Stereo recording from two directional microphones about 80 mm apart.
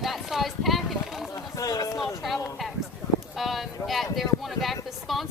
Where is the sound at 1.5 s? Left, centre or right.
Left.